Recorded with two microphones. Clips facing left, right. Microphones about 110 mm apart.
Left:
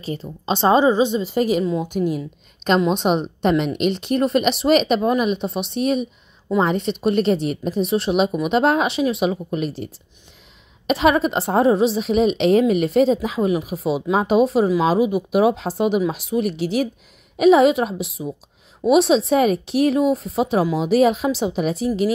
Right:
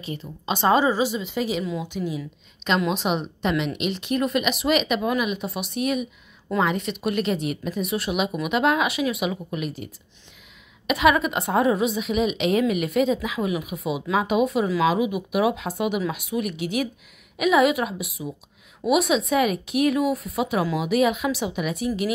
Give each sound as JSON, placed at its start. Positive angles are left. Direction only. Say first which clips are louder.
{"t": 0.0, "sound": "a woman's voice", "louder": "left 5 dB", "side_deg": 35}
{"t": 1.3, "sound": "a woman's voice", "louder": "left 7 dB", "side_deg": 50}